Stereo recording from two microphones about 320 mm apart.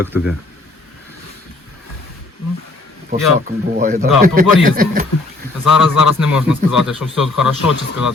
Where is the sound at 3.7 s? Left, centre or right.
Right.